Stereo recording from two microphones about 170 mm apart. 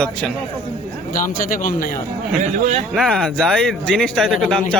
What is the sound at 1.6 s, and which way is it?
Speech, 55° left (ahead or behind).